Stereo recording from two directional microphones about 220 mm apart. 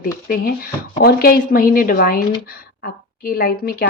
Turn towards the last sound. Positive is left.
turn(degrees=45)  # may be behind; listen again after turning